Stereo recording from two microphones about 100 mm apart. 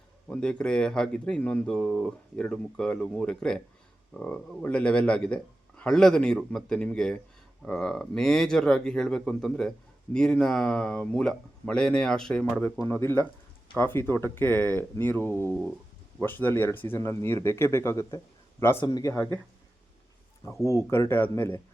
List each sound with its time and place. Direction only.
0.3 s speech: 10° left (ahead or behind)
12.9 s speech: 25° left (ahead or behind)
18.8 s speech: 45° left (ahead or behind)
20.7 s speech: 25° left (ahead or behind)